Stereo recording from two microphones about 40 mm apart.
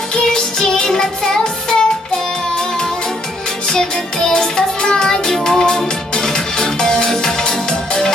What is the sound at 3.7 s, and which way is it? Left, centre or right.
Music, centre.